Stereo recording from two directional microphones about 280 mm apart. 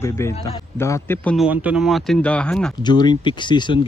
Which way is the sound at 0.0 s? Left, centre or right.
Centre.